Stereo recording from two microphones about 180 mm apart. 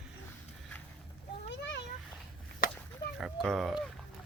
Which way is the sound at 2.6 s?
55° left (ahead or behind).